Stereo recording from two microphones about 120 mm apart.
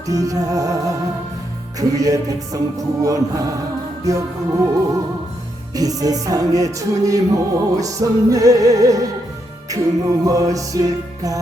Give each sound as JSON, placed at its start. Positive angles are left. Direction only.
{"t": 0.1, "sound": "music", "side_deg": -30}
{"t": 2.0, "sound": "music", "side_deg": -30}
{"t": 5.7, "sound": "music", "side_deg": -30}